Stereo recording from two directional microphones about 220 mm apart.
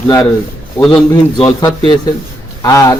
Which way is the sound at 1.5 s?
20° left (ahead or behind).